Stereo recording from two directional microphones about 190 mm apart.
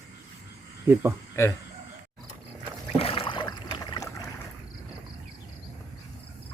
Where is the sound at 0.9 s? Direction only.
10° right (ahead or behind).